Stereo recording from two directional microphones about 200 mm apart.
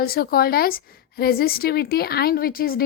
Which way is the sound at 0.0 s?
50° left (ahead or behind).